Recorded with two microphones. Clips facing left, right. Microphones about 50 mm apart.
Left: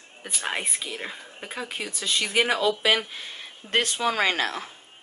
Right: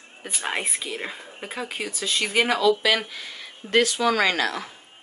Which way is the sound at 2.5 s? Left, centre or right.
Left.